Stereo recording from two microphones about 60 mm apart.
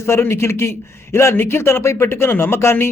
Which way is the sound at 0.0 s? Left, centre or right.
Left.